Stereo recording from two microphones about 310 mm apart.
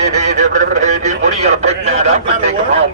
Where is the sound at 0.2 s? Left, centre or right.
Right.